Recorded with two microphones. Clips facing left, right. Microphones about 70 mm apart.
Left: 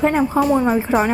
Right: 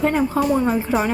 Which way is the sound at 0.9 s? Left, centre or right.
Left.